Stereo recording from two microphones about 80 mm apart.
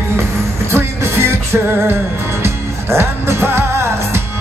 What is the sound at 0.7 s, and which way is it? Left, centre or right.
Music, right.